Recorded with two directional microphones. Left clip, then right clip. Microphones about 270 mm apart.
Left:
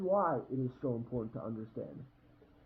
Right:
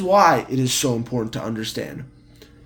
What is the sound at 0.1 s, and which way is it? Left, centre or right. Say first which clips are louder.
Speech: right 18 dB; right.